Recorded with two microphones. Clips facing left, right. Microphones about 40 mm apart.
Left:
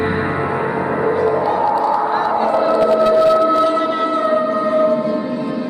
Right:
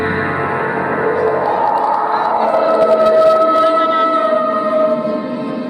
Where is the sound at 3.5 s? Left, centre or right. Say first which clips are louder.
Right 4 dB; right.